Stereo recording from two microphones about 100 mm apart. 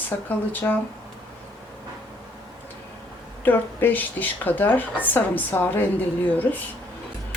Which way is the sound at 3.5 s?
20° left (ahead or behind).